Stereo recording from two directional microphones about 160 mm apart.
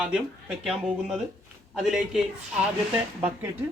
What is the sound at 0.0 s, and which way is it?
Speech, 5° right (ahead or behind).